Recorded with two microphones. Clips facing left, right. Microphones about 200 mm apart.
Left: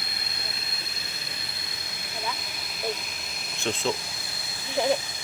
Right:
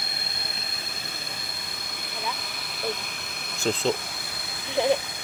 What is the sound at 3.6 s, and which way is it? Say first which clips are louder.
Speech: right 3 dB; 35° right (ahead or behind).